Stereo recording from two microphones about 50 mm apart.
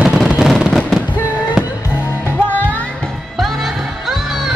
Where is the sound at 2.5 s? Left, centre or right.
Left.